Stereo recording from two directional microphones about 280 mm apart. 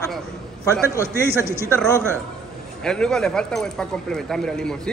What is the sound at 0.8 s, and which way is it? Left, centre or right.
Speech, centre.